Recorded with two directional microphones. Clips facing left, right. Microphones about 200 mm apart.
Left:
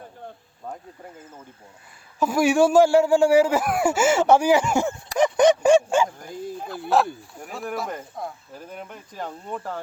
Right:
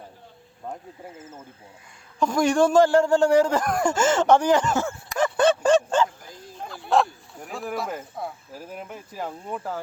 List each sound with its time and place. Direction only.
0.7 s speech: 5° right (ahead or behind)
2.1 s a man's voice: 5° left (ahead or behind)
5.1 s a sound: 15° left (ahead or behind)
6.3 s speech: 5° left (ahead or behind)